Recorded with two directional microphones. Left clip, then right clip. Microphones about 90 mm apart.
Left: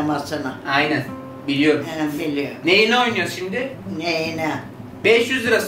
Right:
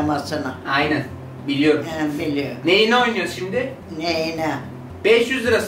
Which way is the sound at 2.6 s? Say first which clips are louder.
Even; 10° left (ahead or behind).